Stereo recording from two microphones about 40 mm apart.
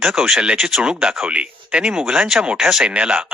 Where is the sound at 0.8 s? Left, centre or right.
Right.